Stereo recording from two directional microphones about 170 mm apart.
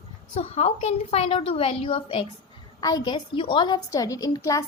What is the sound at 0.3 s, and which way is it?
A woman's voice, 40° left (ahead or behind).